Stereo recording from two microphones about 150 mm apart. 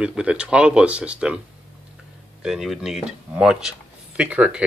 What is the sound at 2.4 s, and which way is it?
Speech, 5° right (ahead or behind).